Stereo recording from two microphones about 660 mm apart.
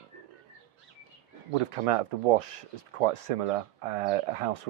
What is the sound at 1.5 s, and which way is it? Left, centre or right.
Speech, right.